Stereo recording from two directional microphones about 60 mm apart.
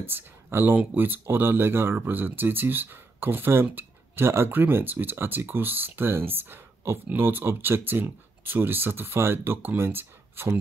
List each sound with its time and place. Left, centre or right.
0.0 s speech: right